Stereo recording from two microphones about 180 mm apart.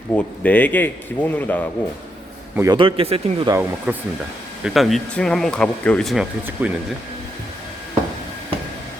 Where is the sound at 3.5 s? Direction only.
10° right (ahead or behind).